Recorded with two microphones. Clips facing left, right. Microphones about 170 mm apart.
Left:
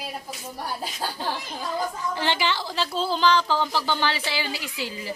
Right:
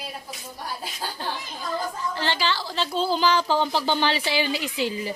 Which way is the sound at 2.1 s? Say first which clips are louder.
Left 1 dB; 15° left (ahead or behind).